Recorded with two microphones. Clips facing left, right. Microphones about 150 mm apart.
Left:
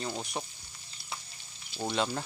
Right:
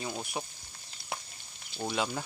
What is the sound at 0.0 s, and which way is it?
Speech, 5° right (ahead or behind).